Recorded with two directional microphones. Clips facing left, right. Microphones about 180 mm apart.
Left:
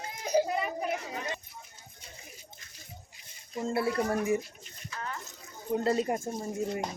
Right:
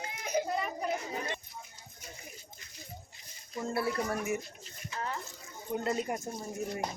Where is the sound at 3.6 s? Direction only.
25° left (ahead or behind).